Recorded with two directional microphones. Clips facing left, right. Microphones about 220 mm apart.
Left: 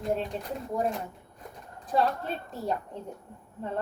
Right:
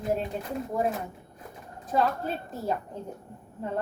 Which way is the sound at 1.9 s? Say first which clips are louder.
Right 1 dB; 5° right (ahead or behind).